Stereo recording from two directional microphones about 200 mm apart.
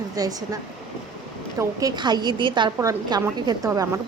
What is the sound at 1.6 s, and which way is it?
A woman's voice, 15° right (ahead or behind).